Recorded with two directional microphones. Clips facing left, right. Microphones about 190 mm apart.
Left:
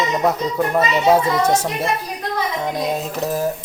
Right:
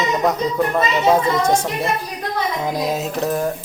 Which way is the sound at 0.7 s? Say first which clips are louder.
Left 2 dB; 10° left (ahead or behind).